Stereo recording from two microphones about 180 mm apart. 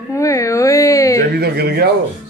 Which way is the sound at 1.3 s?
60° right (ahead or behind).